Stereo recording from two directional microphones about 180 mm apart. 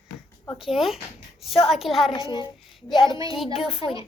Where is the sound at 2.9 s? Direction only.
25° left (ahead or behind).